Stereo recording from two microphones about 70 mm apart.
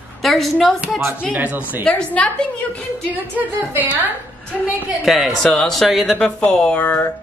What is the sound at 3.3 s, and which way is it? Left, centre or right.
Speech, right.